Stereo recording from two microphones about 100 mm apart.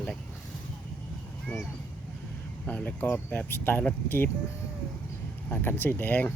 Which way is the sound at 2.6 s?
15° left (ahead or behind).